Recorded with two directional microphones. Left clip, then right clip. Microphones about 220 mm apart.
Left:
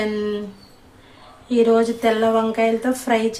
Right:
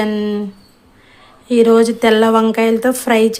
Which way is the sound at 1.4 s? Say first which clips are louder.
Right 6 dB; 45° right (ahead or behind).